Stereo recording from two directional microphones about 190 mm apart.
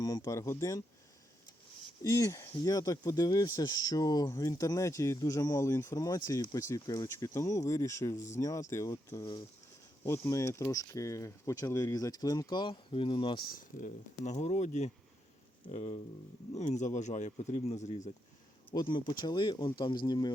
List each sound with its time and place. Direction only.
0.0 s speech: 20° left (ahead or behind)
2.0 s speech: 15° left (ahead or behind)
13.4 s speech: 45° left (ahead or behind)
18.7 s speech: 20° left (ahead or behind)